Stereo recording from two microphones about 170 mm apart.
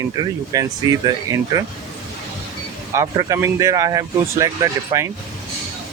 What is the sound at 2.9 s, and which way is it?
Speech, 20° right (ahead or behind).